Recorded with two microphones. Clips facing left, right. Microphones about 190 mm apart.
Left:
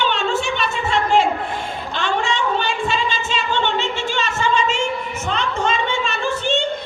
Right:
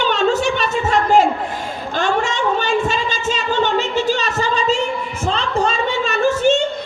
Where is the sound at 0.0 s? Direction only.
40° right (ahead or behind).